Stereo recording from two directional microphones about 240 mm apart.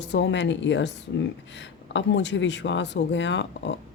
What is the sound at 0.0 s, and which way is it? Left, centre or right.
Speech, left.